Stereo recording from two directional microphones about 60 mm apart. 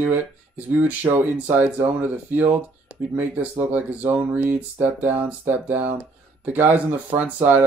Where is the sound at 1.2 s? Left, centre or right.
Right.